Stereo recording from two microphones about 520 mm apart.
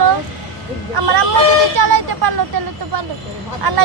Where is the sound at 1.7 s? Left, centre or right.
Right.